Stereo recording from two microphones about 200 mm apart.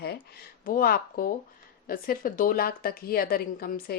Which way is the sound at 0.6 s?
45° left (ahead or behind).